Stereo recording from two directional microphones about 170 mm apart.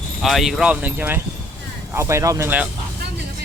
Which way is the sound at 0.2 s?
Centre (ahead or behind).